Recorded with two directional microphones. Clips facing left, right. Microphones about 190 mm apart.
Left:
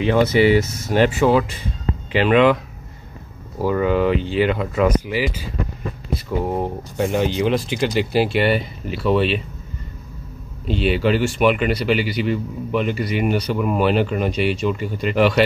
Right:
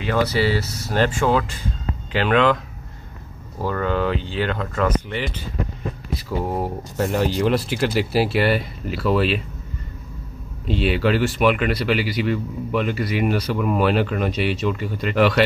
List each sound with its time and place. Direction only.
0.0 s speech: 20° left (ahead or behind)
3.6 s speech: 10° left (ahead or behind)
10.7 s speech: centre (ahead or behind)